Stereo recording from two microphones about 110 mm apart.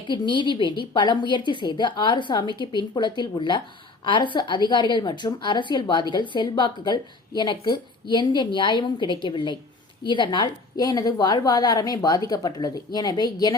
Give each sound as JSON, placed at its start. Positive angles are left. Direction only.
{"t": 0.1, "sound": "a woman's voice", "side_deg": 45}
{"t": 10.8, "sound": "a woman's voice", "side_deg": 35}